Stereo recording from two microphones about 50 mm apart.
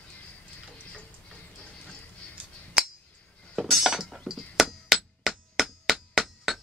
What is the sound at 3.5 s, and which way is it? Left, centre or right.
Chink, centre.